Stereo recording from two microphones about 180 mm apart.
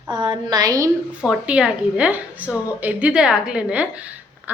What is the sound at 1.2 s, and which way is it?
A woman's voice, 5° right (ahead or behind).